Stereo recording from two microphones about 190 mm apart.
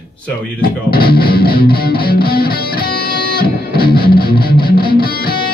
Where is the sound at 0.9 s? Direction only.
55° left (ahead or behind).